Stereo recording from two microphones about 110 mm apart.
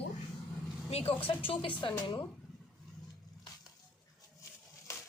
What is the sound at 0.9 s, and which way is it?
Speech, 65° left (ahead or behind).